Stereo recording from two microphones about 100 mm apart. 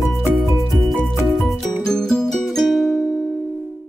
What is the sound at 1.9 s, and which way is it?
Music, 5° left (ahead or behind).